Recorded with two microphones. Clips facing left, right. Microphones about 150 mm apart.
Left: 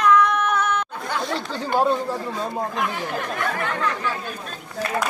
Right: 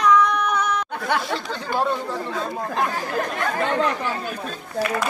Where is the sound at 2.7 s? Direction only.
40° right (ahead or behind).